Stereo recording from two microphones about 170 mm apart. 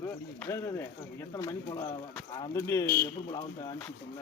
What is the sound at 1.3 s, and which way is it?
Speech, 20° left (ahead or behind).